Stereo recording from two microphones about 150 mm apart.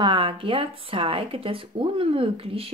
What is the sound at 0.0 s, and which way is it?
Speech, 35° right (ahead or behind).